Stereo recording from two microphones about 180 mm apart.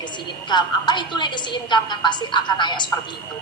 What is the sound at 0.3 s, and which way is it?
A woman's voice, 25° left (ahead or behind).